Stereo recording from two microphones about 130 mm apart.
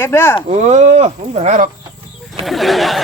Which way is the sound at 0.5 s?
60° right (ahead or behind).